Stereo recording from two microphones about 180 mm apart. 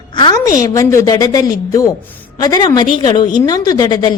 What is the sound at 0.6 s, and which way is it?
A woman's voice, 20° left (ahead or behind).